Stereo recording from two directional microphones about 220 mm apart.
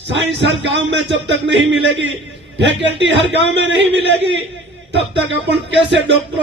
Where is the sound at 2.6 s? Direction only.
55° right (ahead or behind).